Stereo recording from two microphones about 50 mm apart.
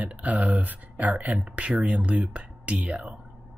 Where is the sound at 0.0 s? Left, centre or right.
Right.